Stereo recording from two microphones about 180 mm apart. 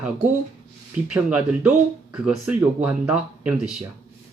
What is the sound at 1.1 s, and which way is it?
Speech, 5° right (ahead or behind).